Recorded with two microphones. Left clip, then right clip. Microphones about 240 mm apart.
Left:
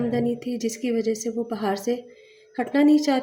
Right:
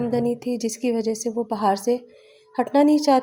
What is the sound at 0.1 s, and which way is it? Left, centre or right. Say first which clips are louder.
A woman's voice: right 2 dB; centre.